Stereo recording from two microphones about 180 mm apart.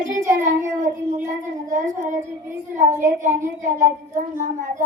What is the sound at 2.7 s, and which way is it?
A child's voice, 45° right (ahead or behind).